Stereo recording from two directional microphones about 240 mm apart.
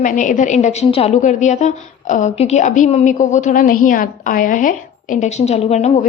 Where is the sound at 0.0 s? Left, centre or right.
Left.